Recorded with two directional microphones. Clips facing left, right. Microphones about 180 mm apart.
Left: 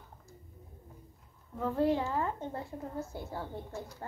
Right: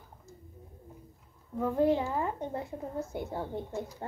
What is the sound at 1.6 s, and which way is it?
A woman's voice, 20° right (ahead or behind).